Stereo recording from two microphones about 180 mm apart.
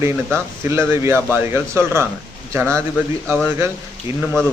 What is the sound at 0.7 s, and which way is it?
A man's voice, 15° right (ahead or behind).